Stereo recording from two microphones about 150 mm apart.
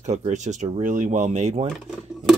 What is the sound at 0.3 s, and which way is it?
Speech, 50° right (ahead or behind).